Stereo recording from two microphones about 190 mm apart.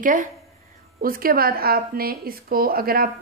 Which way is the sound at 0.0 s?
45° right (ahead or behind).